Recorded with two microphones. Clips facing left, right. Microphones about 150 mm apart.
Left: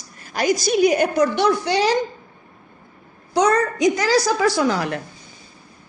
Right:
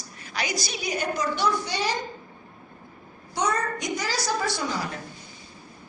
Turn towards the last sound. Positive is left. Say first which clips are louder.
# left 9 dB
turn(degrees=85)